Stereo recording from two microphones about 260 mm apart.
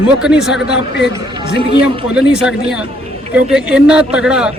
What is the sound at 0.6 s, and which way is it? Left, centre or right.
Speech, left.